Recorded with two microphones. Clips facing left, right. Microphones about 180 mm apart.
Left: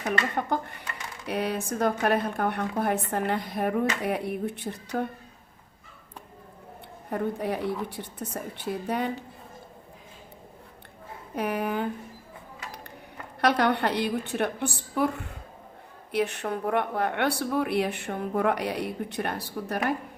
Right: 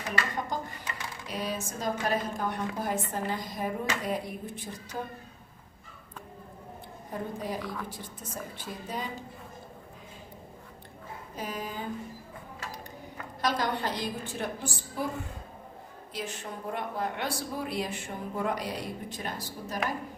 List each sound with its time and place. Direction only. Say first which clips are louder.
0.3 s a woman's voice: left 5 dB; 60° left (ahead or behind)
7.1 s a woman's voice: left 6 dB; 65° left (ahead or behind)
7.6 s a woman's voice: left 7 dB; 25° left (ahead or behind)
7.9 s a woman's voice: left 5 dB; 65° left (ahead or behind)
11.3 s a woman's voice: left 9 dB; 65° left (ahead or behind)
13.4 s a woman's voice: left 6 dB; 65° left (ahead or behind)
16.1 s a woman's voice: left 10 dB; 65° left (ahead or behind)